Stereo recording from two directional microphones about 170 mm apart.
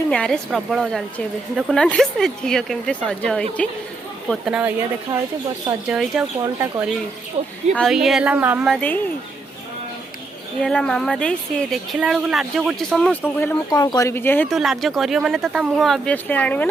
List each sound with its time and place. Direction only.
0.1 s a woman's voice: 5° left (ahead or behind)
5.9 s a woman's voice: 5° right (ahead or behind)
6.4 s speech: 20° right (ahead or behind)
7.4 s speech: 35° right (ahead or behind)
7.7 s a woman's voice: centre (ahead or behind)
10.6 s a woman's voice: 5° left (ahead or behind)
13.7 s speech: 20° left (ahead or behind)
14.4 s a woman's voice: centre (ahead or behind)